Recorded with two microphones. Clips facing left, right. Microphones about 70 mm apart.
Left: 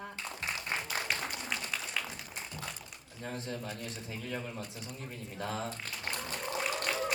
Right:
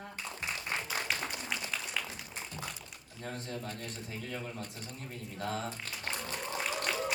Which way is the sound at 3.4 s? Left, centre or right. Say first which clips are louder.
Left 2 dB; right.